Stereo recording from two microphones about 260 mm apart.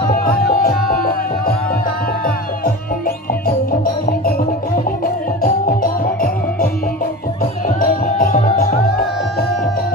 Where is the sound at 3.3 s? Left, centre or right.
Left.